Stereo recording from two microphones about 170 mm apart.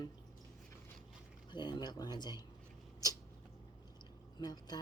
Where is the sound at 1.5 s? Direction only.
25° left (ahead or behind).